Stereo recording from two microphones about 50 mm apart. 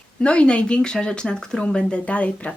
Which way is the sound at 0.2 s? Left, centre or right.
Left.